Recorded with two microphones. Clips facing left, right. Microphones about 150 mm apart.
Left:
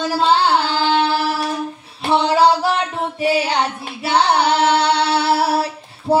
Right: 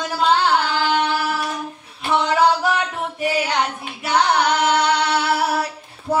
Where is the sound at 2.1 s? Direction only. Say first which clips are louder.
Left 3 dB; 30° left (ahead or behind).